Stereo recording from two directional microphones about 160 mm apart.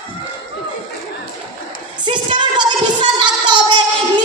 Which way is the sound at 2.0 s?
30° right (ahead or behind).